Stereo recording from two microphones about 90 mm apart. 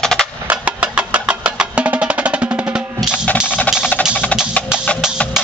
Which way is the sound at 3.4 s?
15° left (ahead or behind).